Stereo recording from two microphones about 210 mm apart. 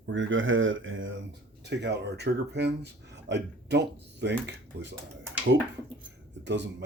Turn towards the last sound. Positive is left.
turn(degrees=-55)  # may be behind; listen again after turning